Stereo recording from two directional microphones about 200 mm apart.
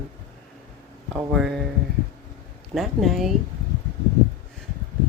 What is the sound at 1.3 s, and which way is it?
Speech, centre (ahead or behind).